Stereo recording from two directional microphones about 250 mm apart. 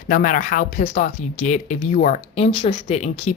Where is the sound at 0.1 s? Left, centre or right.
Left.